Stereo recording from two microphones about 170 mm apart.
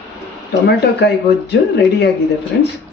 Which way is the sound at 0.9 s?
80° left.